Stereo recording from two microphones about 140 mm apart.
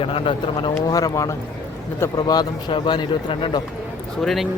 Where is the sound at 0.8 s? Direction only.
25° left (ahead or behind).